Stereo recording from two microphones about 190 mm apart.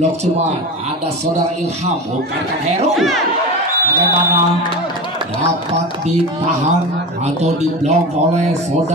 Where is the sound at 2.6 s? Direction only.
35° right (ahead or behind).